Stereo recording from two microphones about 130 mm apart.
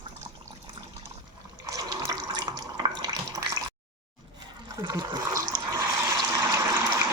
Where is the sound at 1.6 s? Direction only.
25° right (ahead or behind).